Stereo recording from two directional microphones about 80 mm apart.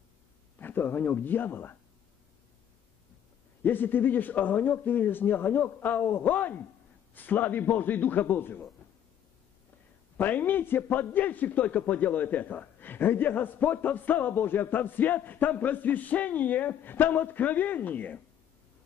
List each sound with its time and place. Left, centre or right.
0.6 s speech: left
3.6 s a man's voice: left
10.1 s a man's voice: left